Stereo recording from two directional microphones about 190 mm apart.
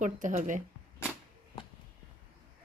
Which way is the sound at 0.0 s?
40° right (ahead or behind).